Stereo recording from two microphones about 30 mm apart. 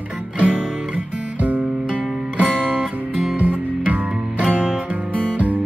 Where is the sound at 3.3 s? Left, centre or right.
Right.